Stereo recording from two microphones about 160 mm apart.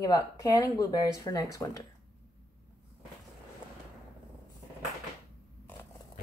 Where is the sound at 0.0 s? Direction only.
25° left (ahead or behind).